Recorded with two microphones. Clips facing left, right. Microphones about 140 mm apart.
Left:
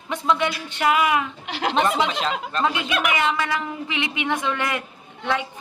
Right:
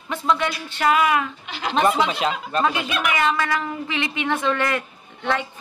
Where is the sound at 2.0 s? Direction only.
10° right (ahead or behind).